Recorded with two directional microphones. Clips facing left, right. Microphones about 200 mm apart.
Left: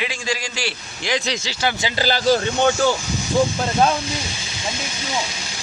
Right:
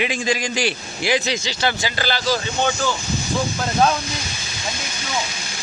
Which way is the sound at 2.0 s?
50° left (ahead or behind).